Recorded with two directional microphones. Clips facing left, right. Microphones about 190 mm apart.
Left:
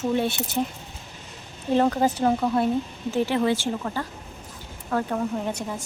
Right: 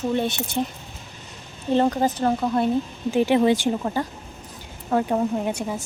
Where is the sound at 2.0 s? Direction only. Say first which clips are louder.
Even; 10° left (ahead or behind).